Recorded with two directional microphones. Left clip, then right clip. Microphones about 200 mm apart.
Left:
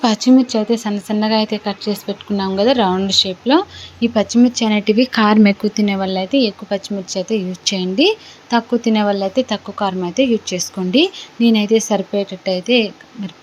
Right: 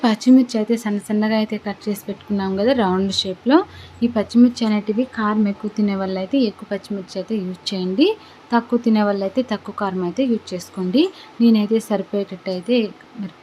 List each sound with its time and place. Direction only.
0.0 s speech: centre (ahead or behind)
4.9 s speech: 25° left (ahead or behind)
5.7 s speech: 5° left (ahead or behind)